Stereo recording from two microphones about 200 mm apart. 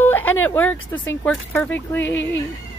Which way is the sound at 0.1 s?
10° left (ahead or behind).